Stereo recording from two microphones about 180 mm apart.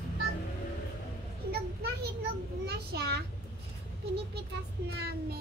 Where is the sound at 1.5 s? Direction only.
60° right (ahead or behind).